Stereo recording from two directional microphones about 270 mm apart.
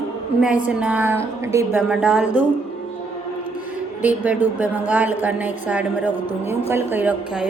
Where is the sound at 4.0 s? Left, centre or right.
Centre.